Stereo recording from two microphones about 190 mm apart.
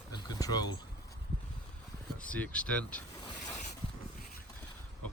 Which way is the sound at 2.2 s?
5° left (ahead or behind).